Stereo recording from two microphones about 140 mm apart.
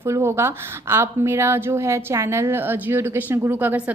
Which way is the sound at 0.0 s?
20° right (ahead or behind).